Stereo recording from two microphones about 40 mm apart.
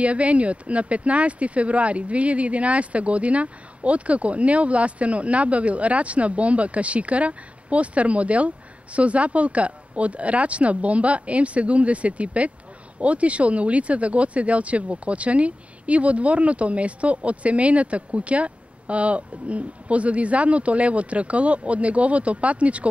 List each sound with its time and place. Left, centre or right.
0.0 s speech: right